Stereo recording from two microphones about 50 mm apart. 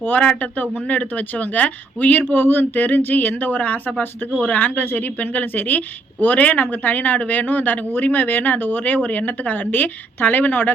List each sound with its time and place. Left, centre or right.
0.2 s a woman's voice: left